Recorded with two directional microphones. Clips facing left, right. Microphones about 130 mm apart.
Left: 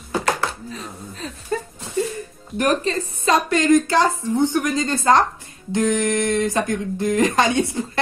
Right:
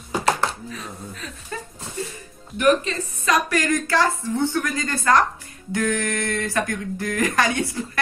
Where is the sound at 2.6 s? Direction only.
35° left (ahead or behind).